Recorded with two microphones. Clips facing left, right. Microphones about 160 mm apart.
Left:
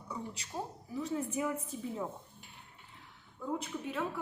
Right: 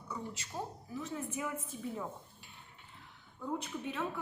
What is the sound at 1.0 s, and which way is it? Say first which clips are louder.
Speech: left 5 dB; 30° left (ahead or behind).